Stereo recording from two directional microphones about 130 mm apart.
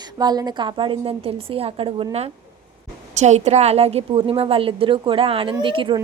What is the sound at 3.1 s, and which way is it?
A woman's voice, 60° right (ahead or behind).